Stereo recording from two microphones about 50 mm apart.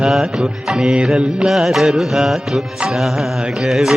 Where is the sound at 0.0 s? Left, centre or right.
Centre.